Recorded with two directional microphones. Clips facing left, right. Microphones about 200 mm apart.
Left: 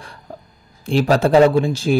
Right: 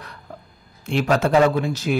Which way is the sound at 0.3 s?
30° left (ahead or behind).